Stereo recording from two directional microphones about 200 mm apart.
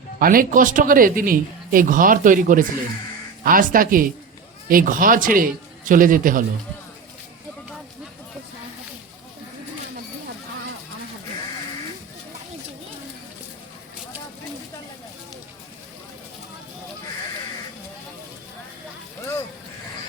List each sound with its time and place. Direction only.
0.2 s speech: 45° right (ahead or behind)